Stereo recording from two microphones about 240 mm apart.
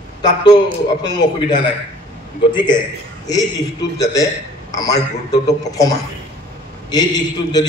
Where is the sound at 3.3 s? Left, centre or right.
Centre.